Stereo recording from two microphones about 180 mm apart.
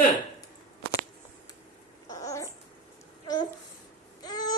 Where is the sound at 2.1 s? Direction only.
20° left (ahead or behind).